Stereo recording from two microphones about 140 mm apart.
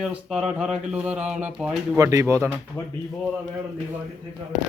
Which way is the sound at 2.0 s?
25° right (ahead or behind).